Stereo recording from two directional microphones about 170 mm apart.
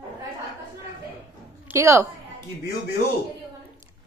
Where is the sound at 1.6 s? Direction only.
15° right (ahead or behind).